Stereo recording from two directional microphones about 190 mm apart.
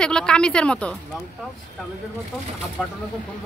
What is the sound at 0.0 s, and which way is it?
Speech, 5° left (ahead or behind).